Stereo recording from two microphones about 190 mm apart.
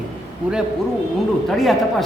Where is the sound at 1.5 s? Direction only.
Centre (ahead or behind).